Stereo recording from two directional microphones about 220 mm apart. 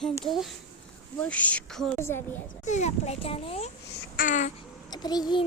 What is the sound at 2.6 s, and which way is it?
Speech, 30° left (ahead or behind).